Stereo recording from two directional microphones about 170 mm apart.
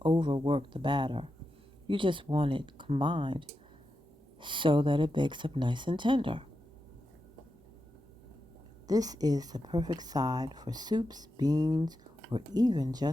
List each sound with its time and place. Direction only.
0.0 s speech: 30° right (ahead or behind)
8.9 s speech: 20° right (ahead or behind)